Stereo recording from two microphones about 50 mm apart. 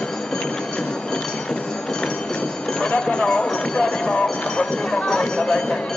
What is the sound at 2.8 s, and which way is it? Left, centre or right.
Speech, centre.